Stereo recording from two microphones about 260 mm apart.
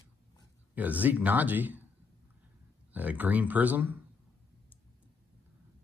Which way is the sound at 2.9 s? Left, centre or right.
Centre.